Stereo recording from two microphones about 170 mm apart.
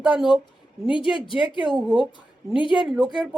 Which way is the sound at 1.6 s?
Centre (ahead or behind).